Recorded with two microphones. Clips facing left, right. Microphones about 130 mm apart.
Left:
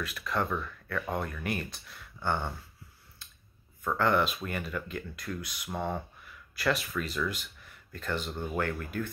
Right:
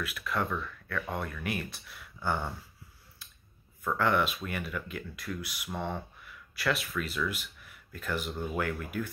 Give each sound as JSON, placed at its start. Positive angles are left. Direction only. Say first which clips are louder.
{"t": 0.0, "sound": "speech", "louder": "left 1 dB", "side_deg": -5}
{"t": 4.0, "sound": "speech", "louder": "left 1 dB", "side_deg": -5}
{"t": 5.7, "sound": "speech", "louder": "left 2 dB", "side_deg": 5}